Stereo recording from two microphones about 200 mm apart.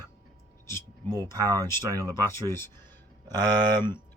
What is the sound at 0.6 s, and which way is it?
Speech, 10° left (ahead or behind).